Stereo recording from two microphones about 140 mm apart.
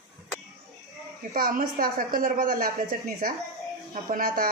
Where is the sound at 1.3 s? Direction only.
85° right.